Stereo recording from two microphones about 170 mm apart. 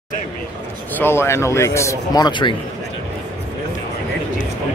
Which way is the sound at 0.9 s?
15° left (ahead or behind).